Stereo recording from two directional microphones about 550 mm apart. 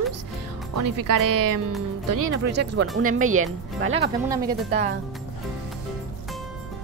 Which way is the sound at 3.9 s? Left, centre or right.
Centre.